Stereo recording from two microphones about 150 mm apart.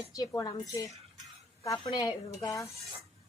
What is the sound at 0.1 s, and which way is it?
A woman's voice, 25° left (ahead or behind).